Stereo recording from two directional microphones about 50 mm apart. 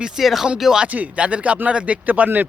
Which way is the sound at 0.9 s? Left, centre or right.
Right.